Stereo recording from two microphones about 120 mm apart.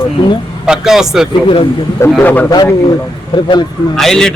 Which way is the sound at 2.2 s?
15° left (ahead or behind).